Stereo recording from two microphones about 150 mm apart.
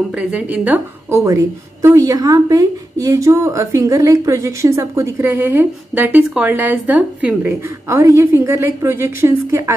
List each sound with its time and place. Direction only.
0.2 s a woman's voice: 10° right (ahead or behind)
1.2 s a woman's voice: 20° right (ahead or behind)